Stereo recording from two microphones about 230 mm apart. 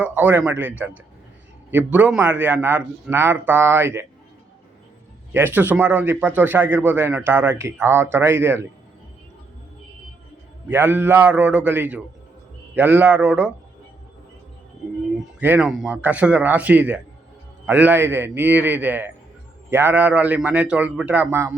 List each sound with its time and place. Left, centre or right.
0.0 s a man's voice: centre
5.3 s a man's voice: centre
10.7 s a man's voice: centre
15.4 s a man's voice: centre